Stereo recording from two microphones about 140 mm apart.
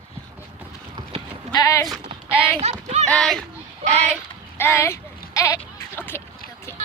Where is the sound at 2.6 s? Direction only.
50° right (ahead or behind).